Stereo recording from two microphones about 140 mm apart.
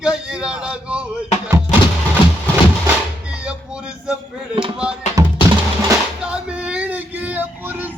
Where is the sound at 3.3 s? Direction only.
5° right (ahead or behind).